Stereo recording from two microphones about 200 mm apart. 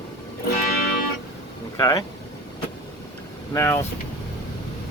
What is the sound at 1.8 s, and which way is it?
Speech, 15° left (ahead or behind).